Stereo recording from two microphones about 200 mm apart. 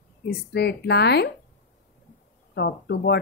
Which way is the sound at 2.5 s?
55° left (ahead or behind).